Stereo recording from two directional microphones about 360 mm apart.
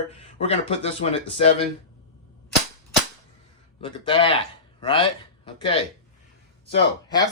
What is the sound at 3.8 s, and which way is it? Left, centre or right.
A man's voice, centre.